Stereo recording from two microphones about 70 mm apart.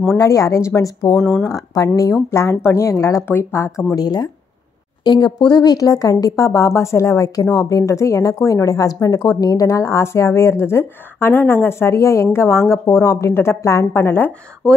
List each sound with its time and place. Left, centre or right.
0.2 s a woman's voice: left
1.2 s speech: centre
1.5 s a woman's voice: left
2.2 s a woman's voice: left
3.3 s a woman's voice: left
3.9 s a woman's voice: left
5.0 s a woman's voice: left
9.7 s a woman's voice: left